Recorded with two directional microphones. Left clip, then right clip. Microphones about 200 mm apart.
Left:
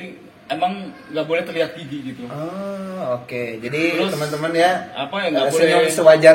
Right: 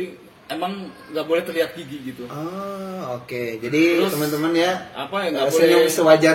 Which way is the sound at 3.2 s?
50° right (ahead or behind).